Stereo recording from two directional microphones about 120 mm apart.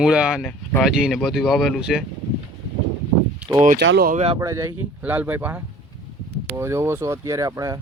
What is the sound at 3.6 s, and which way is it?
Speech, 85° right.